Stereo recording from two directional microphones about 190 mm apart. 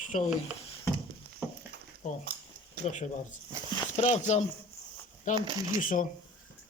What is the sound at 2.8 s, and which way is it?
Speech, 40° left (ahead or behind).